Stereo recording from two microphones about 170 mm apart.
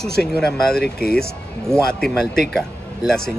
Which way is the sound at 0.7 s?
65° left (ahead or behind).